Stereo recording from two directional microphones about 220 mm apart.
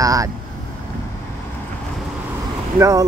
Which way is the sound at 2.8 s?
15° right (ahead or behind).